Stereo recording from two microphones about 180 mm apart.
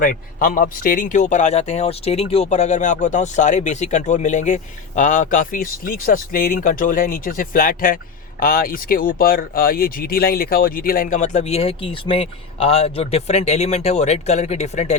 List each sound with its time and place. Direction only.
0.0 s a man's voice: 55° left (ahead or behind)